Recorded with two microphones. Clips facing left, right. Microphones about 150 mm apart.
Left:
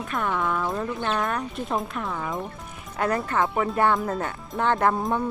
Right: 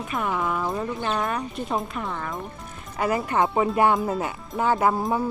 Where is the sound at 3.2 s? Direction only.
15° right (ahead or behind).